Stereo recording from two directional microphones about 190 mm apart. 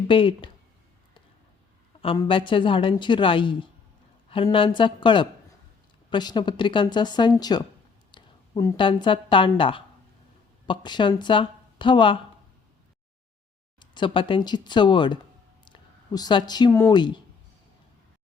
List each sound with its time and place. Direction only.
0.1 s a woman's voice: 25° left (ahead or behind)
2.1 s a woman's voice: 25° left (ahead or behind)
13.7 s a woman's voice: 25° left (ahead or behind)